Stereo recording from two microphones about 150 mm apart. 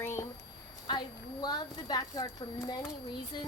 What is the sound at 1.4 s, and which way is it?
A woman's voice, 25° left (ahead or behind).